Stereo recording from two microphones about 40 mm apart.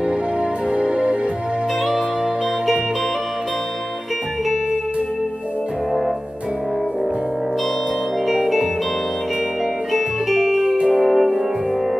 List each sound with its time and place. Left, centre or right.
0.7 s music: right
8.3 s music: centre
9.9 s music: centre